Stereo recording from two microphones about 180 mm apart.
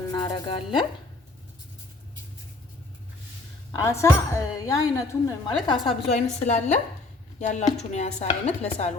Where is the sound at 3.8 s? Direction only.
15° left (ahead or behind).